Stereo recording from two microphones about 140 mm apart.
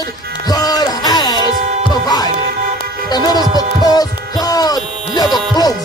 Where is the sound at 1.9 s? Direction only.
30° left (ahead or behind).